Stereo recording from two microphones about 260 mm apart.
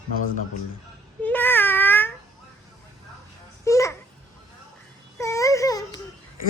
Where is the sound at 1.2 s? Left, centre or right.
Centre.